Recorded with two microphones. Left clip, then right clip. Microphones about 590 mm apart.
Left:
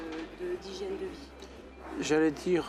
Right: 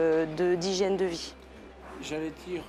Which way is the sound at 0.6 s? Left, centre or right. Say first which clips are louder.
Right 10 dB; right.